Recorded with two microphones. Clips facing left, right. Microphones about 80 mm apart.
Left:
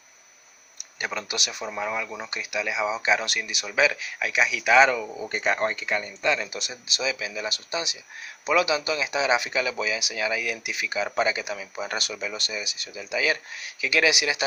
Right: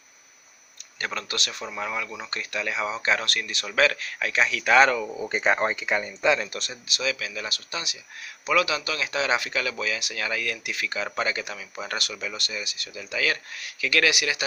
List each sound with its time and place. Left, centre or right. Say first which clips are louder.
0.8 s speech: left 1 dB; centre
5.1 s speech: right 2 dB; centre
6.4 s speech: even; centre